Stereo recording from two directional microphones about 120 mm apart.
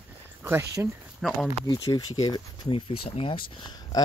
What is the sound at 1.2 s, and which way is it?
Speech, centre (ahead or behind).